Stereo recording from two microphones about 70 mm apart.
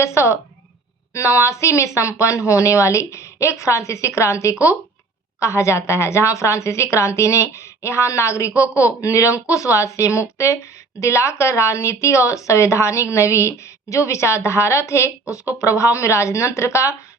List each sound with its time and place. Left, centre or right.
0.0 s a woman's voice: left